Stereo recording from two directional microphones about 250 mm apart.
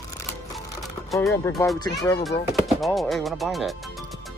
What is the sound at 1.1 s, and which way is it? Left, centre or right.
Speech, centre.